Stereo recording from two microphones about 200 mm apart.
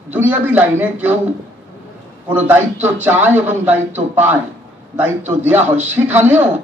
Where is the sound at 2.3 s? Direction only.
10° right (ahead or behind).